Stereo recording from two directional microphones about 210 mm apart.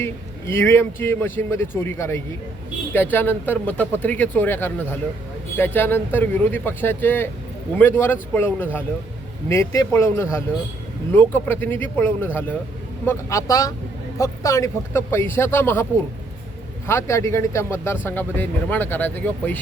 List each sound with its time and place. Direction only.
0.0 s speech: 10° left (ahead or behind)